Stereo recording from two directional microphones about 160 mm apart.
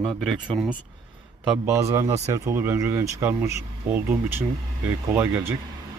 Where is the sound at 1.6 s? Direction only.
20° right (ahead or behind).